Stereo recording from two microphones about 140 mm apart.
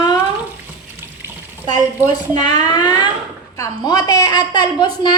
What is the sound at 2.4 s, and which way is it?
A child's voice, 30° left (ahead or behind).